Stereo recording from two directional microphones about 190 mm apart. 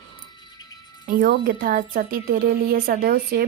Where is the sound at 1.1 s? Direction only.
50° right (ahead or behind).